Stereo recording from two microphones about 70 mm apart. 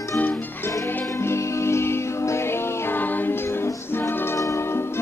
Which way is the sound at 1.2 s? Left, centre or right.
Left.